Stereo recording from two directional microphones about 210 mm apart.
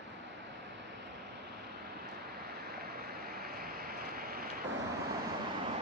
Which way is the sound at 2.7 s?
50° right (ahead or behind).